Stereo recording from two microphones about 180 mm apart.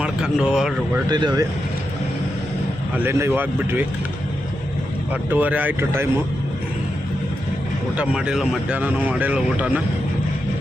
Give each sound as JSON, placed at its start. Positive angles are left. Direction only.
{"t": 0.0, "sound": "speech", "side_deg": -5}
{"t": 1.1, "sound": "speech", "side_deg": -20}
{"t": 3.0, "sound": "speech", "side_deg": -15}
{"t": 5.1, "sound": "speech", "side_deg": -10}
{"t": 7.9, "sound": "speech", "side_deg": -5}